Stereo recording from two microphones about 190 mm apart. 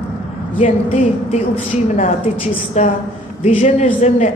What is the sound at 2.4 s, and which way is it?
A woman's voice, 30° left (ahead or behind).